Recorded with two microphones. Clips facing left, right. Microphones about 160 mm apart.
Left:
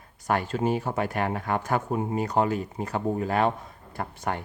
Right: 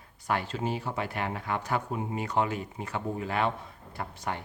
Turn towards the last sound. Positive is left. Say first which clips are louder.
# left 4 dB
turn(degrees=50)  # may be behind; listen again after turning